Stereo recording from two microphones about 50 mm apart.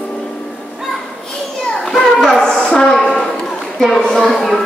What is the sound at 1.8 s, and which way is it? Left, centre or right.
Children playing, centre.